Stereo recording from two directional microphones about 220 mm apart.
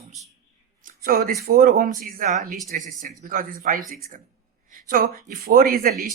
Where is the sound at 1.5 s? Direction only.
40° right (ahead or behind).